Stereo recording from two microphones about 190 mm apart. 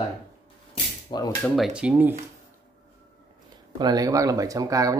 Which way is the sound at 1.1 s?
30° left (ahead or behind).